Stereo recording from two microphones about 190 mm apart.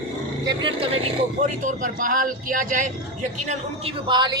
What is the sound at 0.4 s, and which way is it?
Speech, 25° right (ahead or behind).